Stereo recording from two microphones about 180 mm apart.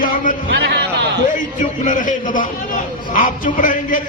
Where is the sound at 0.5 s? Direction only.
65° right (ahead or behind).